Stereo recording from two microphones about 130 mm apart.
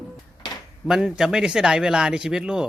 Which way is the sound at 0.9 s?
5° right (ahead or behind).